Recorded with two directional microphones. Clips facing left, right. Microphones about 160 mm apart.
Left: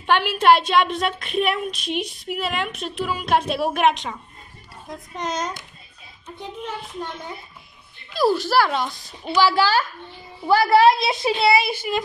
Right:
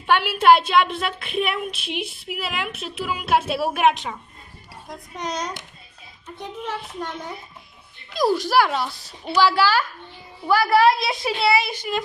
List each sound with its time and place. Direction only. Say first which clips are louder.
0.0 s a woman's voice: even; 10° right (ahead or behind)
8.2 s a woman's voice: even; 15° right (ahead or behind)
10.4 s a woman's voice: left 2 dB; 25° left (ahead or behind)
11.6 s child singing: left 2 dB; 5° left (ahead or behind)